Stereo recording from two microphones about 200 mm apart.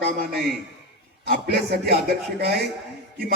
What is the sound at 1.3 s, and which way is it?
Speech, 50° right (ahead or behind).